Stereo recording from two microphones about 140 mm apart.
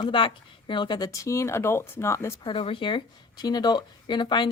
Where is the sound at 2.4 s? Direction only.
40° left (ahead or behind).